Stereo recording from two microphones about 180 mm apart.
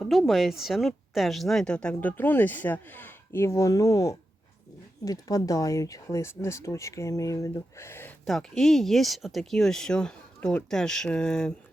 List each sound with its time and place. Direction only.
0.0 s speech: centre (ahead or behind)
8.2 s speech: centre (ahead or behind)